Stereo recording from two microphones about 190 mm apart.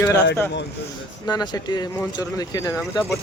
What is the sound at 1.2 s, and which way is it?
Speech, 20° left (ahead or behind).